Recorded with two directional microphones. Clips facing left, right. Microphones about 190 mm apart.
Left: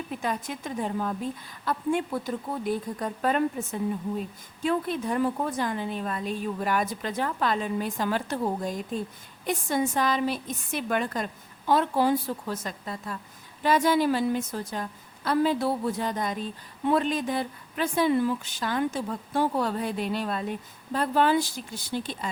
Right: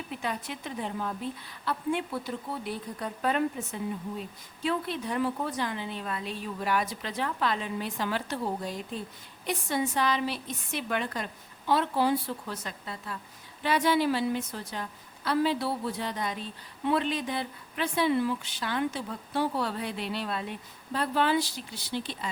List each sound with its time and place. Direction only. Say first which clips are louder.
0.2 s speech: left 3 dB; 45° left (ahead or behind)